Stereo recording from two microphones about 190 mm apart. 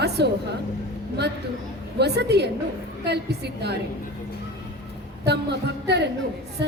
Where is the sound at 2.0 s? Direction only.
60° right (ahead or behind).